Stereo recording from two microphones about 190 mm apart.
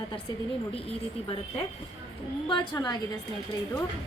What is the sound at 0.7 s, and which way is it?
Speech, 30° left (ahead or behind).